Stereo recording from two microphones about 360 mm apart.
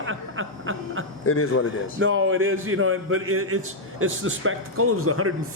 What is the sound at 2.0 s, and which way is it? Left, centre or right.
A man's voice, right.